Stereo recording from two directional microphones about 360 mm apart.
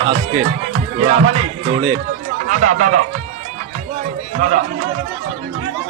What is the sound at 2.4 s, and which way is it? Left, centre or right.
Speech, right.